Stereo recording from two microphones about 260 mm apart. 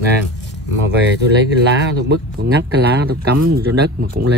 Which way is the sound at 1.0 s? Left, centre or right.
Right.